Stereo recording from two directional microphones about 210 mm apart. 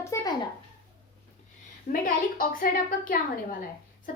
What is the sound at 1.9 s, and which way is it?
Speech, 40° left (ahead or behind).